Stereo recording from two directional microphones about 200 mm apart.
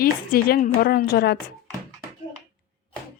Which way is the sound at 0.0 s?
50° left (ahead or behind).